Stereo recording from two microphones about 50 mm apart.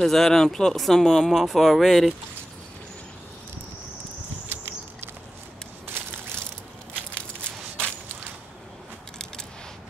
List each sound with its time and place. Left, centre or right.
0.0 s speech: centre
4.5 s a sound: right
5.9 s crushing: right